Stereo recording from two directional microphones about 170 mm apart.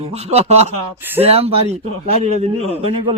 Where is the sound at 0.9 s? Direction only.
10° right (ahead or behind).